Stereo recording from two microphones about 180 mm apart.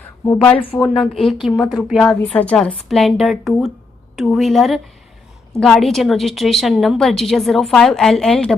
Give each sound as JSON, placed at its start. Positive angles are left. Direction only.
{"t": 0.5, "sound": "speech", "side_deg": 30}
{"t": 0.8, "sound": "a woman's voice", "side_deg": 0}